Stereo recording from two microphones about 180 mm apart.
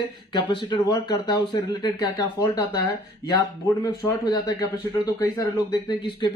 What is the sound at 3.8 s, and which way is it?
Speech, 20° left (ahead or behind).